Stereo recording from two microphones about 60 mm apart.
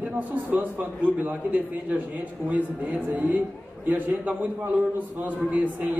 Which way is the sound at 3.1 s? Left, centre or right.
Right.